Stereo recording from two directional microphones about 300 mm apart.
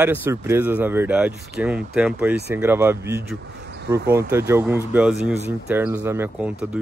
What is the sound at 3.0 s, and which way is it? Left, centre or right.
Speech, right.